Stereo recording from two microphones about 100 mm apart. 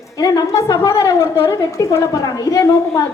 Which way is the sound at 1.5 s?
35° left (ahead or behind).